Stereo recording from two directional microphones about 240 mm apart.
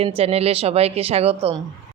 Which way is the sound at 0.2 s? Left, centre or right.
Right.